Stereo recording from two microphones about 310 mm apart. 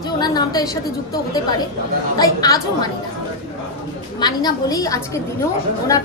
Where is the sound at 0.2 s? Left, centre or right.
Centre.